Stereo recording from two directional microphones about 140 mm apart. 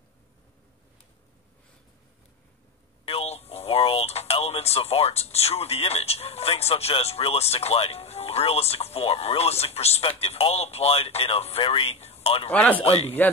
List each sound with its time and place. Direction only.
3.1 s speech: 45° left (ahead or behind)
12.4 s speech: 10° left (ahead or behind)
12.8 s speech: 45° left (ahead or behind)